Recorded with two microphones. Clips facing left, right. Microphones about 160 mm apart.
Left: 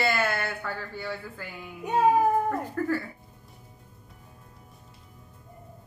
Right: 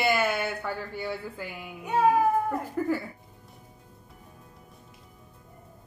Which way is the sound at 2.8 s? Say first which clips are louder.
Right 2 dB; 15° right (ahead or behind).